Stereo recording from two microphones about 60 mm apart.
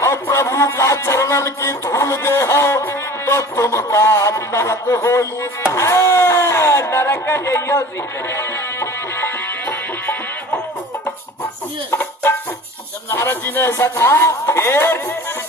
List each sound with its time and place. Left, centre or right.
0.0 s speech: left
8.3 s music: left
9.6 s music: left
11.9 s music: left
13.1 s speech: left